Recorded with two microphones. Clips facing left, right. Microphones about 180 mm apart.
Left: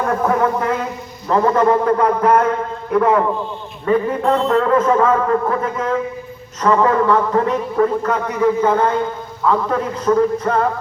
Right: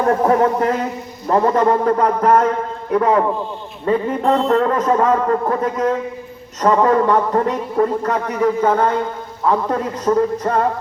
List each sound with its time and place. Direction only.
0.0 s a man's voice: 35° right (ahead or behind)